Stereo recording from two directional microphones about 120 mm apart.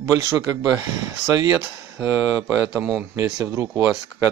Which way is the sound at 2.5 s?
5° right (ahead or behind).